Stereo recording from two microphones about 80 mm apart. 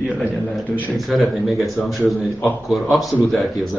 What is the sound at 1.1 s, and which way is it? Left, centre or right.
A man's voice, centre.